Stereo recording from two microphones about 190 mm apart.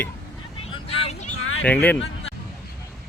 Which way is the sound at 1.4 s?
90° left.